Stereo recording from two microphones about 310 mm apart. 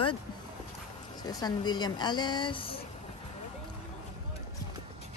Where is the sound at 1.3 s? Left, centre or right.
Centre.